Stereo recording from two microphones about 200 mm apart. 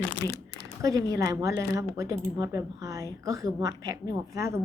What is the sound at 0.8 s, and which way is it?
A woman's voice, 15° right (ahead or behind).